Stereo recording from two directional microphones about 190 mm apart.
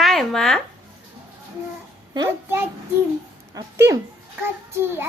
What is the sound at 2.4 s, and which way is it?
A child's voice, 10° right (ahead or behind).